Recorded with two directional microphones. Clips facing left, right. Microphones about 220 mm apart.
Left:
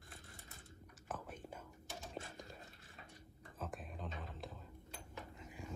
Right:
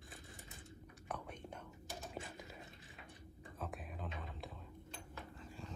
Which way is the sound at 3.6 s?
Centre (ahead or behind).